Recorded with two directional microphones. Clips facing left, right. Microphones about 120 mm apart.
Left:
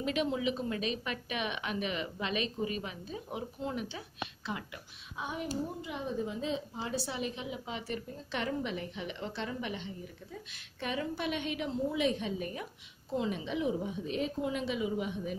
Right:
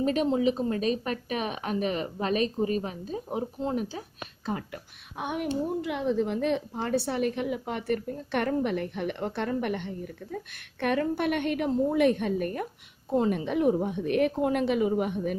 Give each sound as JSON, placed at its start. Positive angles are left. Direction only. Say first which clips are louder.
{"t": 0.0, "sound": "a woman's voice", "louder": "right 7 dB", "side_deg": -40}
{"t": 5.1, "sound": "a woman's voice", "louder": "right 7 dB", "side_deg": -65}
{"t": 5.8, "sound": "a woman's voice", "louder": "right 9 dB", "side_deg": -85}